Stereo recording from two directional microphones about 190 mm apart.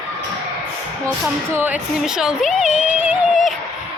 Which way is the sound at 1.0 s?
5° right (ahead or behind).